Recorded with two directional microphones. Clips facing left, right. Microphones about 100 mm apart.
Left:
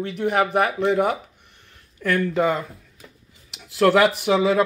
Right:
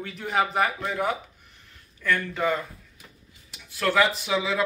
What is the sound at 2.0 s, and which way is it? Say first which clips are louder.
Speech: left 6 dB; 90° left.